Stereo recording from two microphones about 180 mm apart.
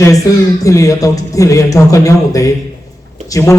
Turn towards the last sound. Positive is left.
turn(degrees=20)  # may be behind; listen again after turning